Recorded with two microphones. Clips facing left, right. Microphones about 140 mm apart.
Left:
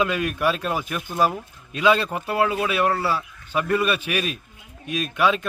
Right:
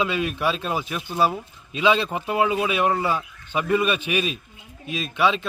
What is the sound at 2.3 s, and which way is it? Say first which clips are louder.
Speech: even; 10° right (ahead or behind).